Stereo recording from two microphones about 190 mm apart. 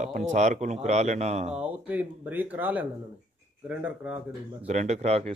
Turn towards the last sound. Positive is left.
turn(degrees=-35)  # may be behind; listen again after turning